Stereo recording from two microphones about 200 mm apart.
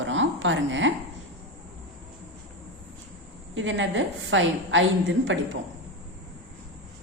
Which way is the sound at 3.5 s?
70° right (ahead or behind).